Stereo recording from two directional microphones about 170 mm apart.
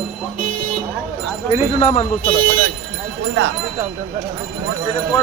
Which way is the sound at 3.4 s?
90° right.